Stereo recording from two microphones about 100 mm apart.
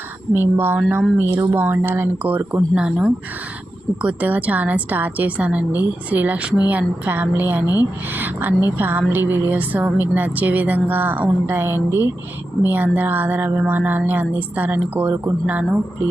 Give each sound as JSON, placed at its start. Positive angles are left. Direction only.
{"t": 0.3, "sound": "a woman's voice", "side_deg": -20}